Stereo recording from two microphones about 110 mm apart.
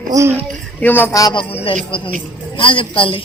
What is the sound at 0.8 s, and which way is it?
Speech, 20° left (ahead or behind).